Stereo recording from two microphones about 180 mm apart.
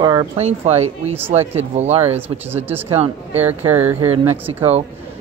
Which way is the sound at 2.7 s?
10° right (ahead or behind).